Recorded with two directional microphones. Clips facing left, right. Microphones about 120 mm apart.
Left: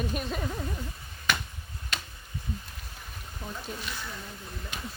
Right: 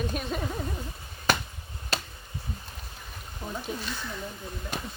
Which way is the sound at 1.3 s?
35° right (ahead or behind).